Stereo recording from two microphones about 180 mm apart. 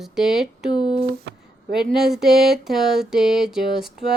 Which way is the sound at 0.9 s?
60° right (ahead or behind).